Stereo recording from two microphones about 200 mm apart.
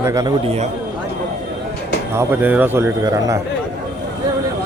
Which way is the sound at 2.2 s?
10° right (ahead or behind).